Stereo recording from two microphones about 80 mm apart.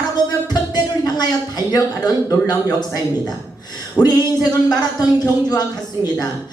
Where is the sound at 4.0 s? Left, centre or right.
Left.